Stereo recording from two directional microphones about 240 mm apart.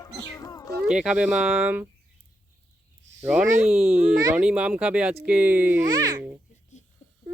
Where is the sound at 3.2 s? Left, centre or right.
Centre.